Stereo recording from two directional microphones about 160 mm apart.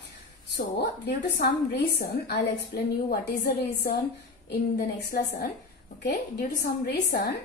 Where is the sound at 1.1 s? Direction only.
80° left.